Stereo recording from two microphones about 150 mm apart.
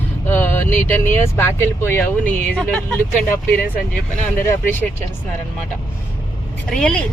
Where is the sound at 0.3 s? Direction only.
15° left (ahead or behind).